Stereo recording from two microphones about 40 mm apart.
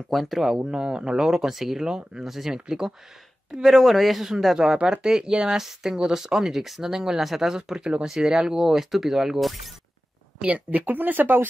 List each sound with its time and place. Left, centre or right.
0.1 s a man's voice: centre
0.7 s speech: centre
1.9 s speech: centre
3.7 s a man's voice: centre
7.8 s speech: right; by 9.6 s centre
10.7 s speech: right